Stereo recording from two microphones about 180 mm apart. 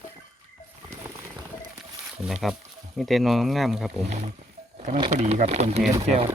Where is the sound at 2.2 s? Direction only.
5° right (ahead or behind).